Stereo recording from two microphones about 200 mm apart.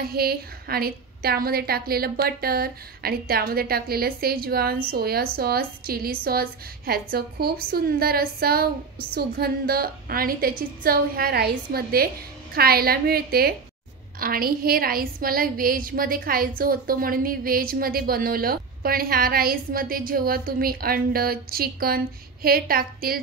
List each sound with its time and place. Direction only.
0.0 s a woman's voice: 50° right (ahead or behind)